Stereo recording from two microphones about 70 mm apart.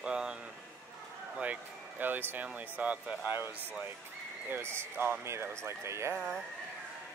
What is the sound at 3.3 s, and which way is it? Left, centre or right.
Speech, right.